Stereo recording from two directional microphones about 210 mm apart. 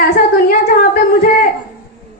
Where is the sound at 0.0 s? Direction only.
45° left (ahead or behind).